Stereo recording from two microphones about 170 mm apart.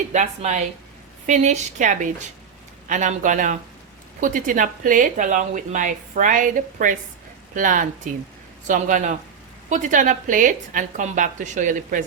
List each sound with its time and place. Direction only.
0.1 s a woman's voice: 45° right (ahead or behind)